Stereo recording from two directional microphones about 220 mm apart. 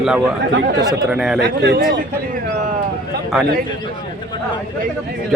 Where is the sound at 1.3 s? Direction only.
50° right (ahead or behind).